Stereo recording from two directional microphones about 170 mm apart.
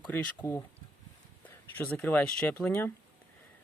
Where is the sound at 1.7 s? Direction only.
10° left (ahead or behind).